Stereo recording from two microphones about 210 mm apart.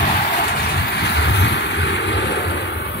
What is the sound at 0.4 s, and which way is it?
Vehicle, 50° left (ahead or behind).